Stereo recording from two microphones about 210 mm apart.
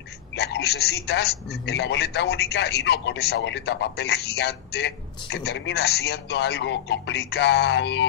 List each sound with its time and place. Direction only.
0.4 s a man's voice: 50° left (ahead or behind)